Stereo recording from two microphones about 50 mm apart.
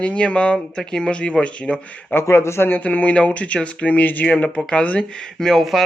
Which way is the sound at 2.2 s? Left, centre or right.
Left.